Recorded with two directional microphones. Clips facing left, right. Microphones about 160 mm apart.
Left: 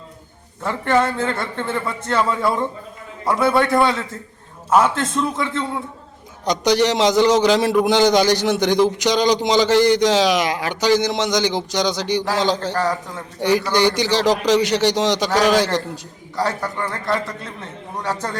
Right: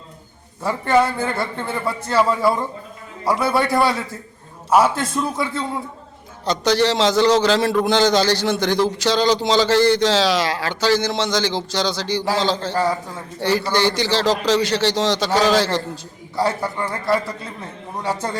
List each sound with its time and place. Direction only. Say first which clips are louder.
0.6 s a man's voice: right 1 dB; 5° right (ahead or behind)
5.1 s a man's voice: left 1 dB; 5° right (ahead or behind)
6.4 s a man's voice: left 1 dB; 15° left (ahead or behind)
12.8 s a man's voice: right 1 dB; 10° right (ahead or behind)
13.4 s a man's voice: left 2 dB; 15° left (ahead or behind)
16.3 s a man's voice: right 1 dB; 10° right (ahead or behind)